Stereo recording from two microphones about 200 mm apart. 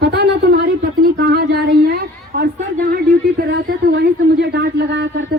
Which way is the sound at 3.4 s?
55° right (ahead or behind).